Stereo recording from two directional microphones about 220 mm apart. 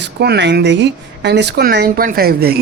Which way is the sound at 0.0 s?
50° right (ahead or behind).